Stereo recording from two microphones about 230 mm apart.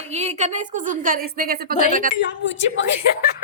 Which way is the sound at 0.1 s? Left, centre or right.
Right.